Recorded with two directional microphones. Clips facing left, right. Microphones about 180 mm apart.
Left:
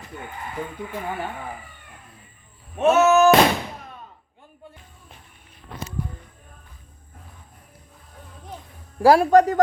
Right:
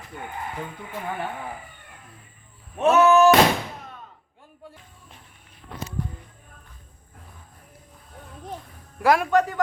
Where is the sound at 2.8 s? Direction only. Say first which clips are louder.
Left 1 dB; 10° left (ahead or behind).